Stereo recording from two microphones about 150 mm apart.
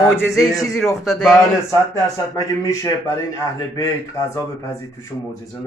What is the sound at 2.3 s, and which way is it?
Speech, 20° left (ahead or behind).